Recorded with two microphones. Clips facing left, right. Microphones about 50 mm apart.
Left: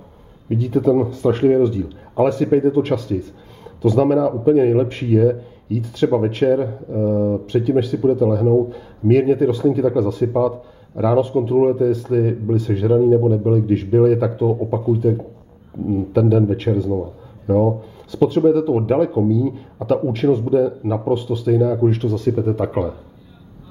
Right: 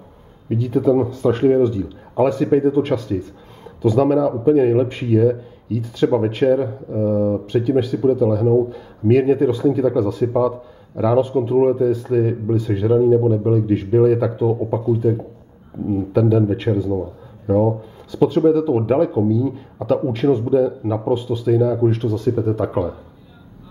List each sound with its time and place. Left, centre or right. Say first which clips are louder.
0.5 s speech: even; centre